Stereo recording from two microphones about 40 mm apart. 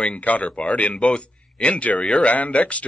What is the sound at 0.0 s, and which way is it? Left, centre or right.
A man's voice, left.